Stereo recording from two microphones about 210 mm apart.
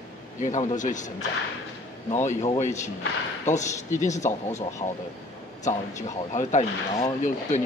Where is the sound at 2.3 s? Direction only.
35° left (ahead or behind).